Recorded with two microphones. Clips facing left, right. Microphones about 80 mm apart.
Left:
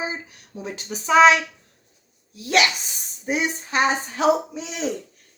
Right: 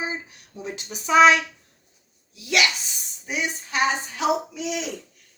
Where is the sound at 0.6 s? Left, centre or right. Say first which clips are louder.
Left 2 dB; left.